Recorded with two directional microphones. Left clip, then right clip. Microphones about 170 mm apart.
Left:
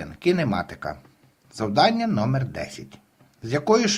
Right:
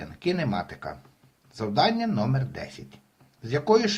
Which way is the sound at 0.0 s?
30° left (ahead or behind).